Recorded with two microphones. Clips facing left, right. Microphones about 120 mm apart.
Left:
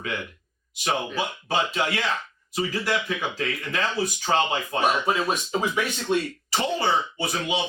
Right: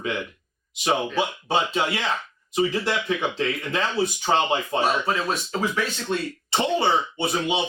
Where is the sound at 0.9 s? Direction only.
25° right (ahead or behind).